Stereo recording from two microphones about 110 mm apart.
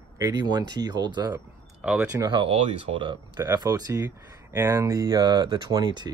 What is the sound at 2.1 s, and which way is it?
Speech, 40° right (ahead or behind).